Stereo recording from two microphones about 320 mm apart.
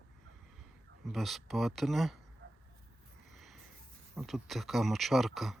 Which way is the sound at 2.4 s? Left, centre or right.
Right.